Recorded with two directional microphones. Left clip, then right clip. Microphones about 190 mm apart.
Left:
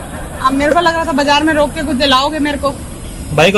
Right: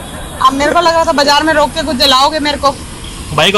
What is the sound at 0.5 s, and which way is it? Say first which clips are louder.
A man's voice: right 2 dB; 15° right (ahead or behind).